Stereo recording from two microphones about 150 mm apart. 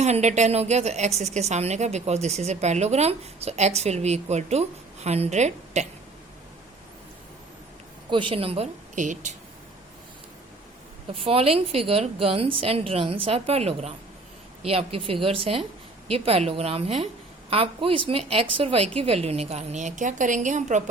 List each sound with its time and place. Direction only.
0.0 s a woman's voice: 50° right (ahead or behind)
8.1 s a woman's voice: 35° right (ahead or behind)
9.0 s speech: 55° right (ahead or behind)
11.2 s a woman's voice: 40° right (ahead or behind)